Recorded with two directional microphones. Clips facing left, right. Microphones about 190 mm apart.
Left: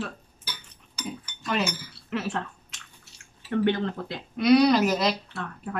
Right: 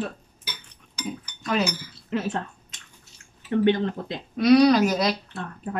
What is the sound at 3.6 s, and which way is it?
Speech, 20° right (ahead or behind).